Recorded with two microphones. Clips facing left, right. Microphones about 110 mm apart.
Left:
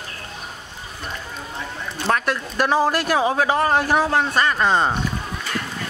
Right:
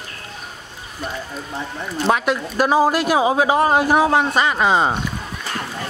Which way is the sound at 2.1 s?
10° right (ahead or behind).